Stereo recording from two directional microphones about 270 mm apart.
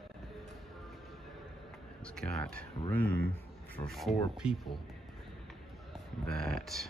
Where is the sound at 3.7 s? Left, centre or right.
Centre.